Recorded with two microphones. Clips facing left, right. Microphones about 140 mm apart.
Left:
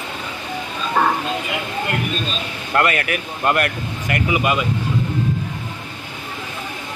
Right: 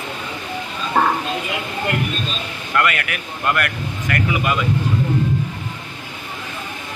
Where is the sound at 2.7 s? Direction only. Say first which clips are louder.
Left 2 dB; 30° left (ahead or behind).